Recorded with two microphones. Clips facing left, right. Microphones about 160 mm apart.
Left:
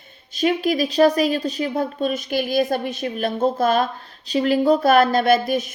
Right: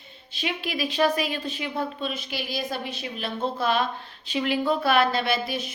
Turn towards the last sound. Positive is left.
turn(degrees=45)  # may be behind; listen again after turning